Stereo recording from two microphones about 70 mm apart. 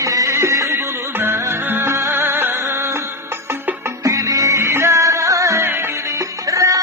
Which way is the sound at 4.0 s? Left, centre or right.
Right.